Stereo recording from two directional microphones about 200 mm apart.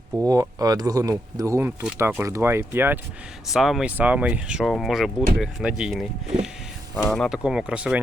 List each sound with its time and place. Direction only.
0.3 s speech: 20° right (ahead or behind)